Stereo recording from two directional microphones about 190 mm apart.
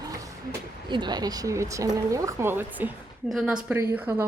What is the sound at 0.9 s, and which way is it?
Speech, 25° right (ahead or behind).